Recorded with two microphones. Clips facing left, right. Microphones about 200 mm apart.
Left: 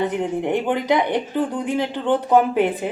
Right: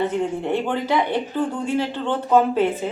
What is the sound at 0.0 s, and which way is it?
Speech, 15° left (ahead or behind).